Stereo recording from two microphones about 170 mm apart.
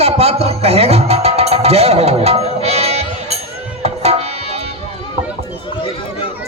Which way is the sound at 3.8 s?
40° right (ahead or behind).